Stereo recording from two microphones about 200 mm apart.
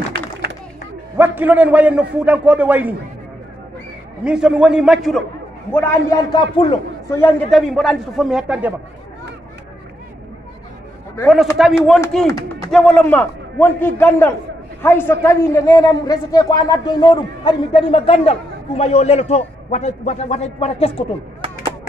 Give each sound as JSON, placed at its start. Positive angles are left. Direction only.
{"t": 0.1, "sound": "a sound", "side_deg": -55}
{"t": 1.1, "sound": "a man's voice", "side_deg": -10}
{"t": 4.2, "sound": "a man's voice", "side_deg": -5}
{"t": 5.7, "sound": "a man's voice", "side_deg": 10}
{"t": 7.5, "sound": "a man's voice", "side_deg": 0}
{"t": 11.7, "sound": "a man's voice", "side_deg": 5}